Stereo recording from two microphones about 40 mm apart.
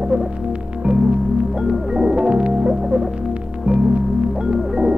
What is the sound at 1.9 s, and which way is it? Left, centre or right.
Music, right.